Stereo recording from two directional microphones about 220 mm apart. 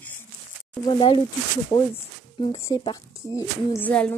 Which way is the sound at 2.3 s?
20° left (ahead or behind).